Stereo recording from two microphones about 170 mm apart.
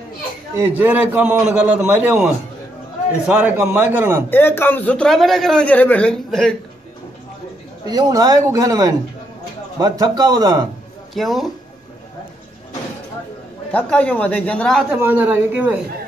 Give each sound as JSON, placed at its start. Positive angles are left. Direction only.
{"t": 0.6, "sound": "a man's voice", "side_deg": -10}
{"t": 4.3, "sound": "a man's voice", "side_deg": 10}
{"t": 7.8, "sound": "speech", "side_deg": -25}
{"t": 11.1, "sound": "speech", "side_deg": 0}
{"t": 13.7, "sound": "a man's voice", "side_deg": 10}
{"t": 14.9, "sound": "a man's voice", "side_deg": -10}